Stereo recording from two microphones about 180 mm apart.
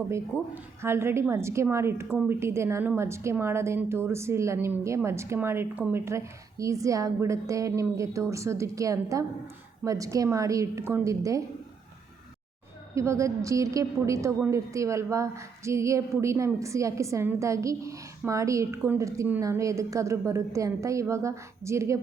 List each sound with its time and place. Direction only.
0.1 s a woman's voice: 15° right (ahead or behind)
12.9 s a woman's voice: 15° right (ahead or behind)